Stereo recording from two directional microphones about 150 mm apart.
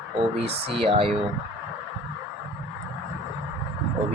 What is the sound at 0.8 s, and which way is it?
Speech, 40° right (ahead or behind).